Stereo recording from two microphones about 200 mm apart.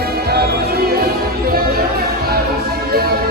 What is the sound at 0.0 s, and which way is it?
Music, 50° right (ahead or behind).